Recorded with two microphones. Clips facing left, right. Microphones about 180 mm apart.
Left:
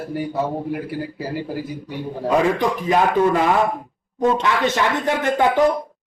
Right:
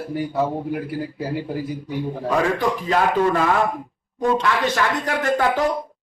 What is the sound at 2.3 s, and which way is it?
A man's voice, 15° left (ahead or behind).